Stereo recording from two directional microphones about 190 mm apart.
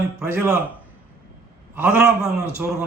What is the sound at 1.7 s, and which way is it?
Speech, 10° right (ahead or behind).